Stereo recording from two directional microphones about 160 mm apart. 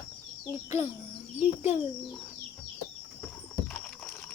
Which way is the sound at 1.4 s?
45° left (ahead or behind).